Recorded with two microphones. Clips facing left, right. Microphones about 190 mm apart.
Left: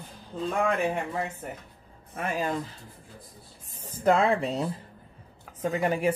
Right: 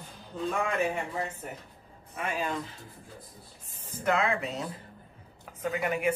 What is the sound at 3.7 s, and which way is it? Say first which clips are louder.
A woman's voice: left 5 dB; 35° left (ahead or behind).